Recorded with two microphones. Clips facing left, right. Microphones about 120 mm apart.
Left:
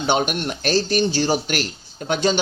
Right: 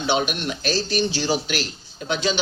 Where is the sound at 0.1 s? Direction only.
50° left (ahead or behind).